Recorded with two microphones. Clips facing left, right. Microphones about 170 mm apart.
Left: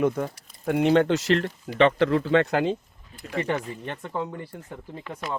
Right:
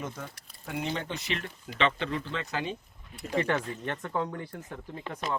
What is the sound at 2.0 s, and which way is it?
Speech, 75° left (ahead or behind).